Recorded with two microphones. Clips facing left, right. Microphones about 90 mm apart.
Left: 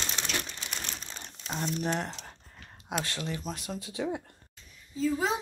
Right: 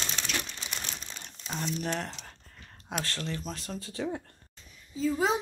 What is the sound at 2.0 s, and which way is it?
A child's voice, 15° left (ahead or behind).